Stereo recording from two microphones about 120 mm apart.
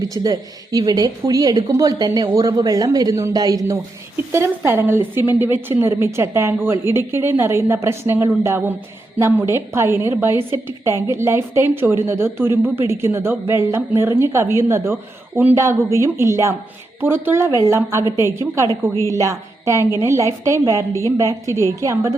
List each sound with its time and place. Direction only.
0.0 s a woman's voice: 30° right (ahead or behind)